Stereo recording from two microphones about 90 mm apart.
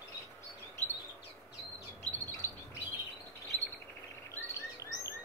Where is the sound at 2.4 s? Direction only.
35° left (ahead or behind).